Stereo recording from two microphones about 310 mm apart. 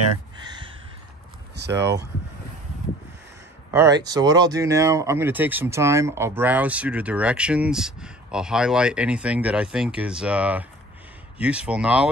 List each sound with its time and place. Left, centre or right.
0.5 s a sound: centre
1.6 s speech: right
3.7 s speech: centre